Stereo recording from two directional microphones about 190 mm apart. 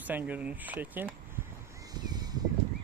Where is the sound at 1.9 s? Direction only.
20° right (ahead or behind).